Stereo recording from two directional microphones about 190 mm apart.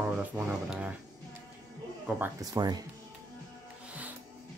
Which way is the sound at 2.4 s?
20° right (ahead or behind).